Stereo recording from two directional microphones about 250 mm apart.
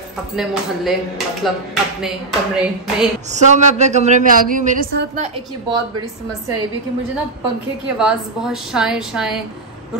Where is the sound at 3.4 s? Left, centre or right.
Right.